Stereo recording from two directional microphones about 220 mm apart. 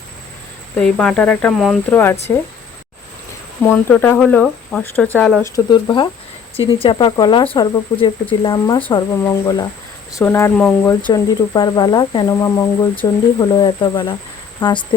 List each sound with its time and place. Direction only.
0.8 s speech: 5° left (ahead or behind)
3.6 s speech: 10° left (ahead or behind)
5.5 s speech: 20° left (ahead or behind)
11.0 s speech: 20° left (ahead or behind)